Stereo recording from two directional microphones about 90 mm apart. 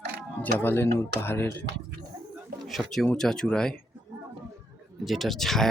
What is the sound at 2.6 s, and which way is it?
Speech, centre (ahead or behind).